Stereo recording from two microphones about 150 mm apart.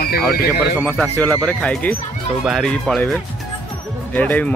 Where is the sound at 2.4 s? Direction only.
5° right (ahead or behind).